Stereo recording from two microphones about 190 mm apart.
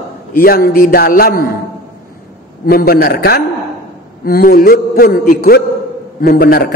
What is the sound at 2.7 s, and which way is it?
A man's voice, 55° left (ahead or behind).